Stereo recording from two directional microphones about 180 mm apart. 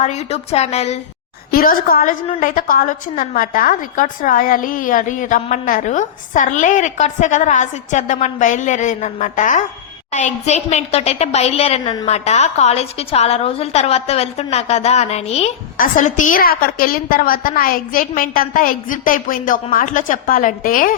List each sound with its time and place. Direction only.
0.0 s a woman's voice: 35° left (ahead or behind)
1.5 s a woman's voice: 55° left (ahead or behind); by 15.5 s 35° left (ahead or behind)
15.8 s a woman's voice: 45° left (ahead or behind)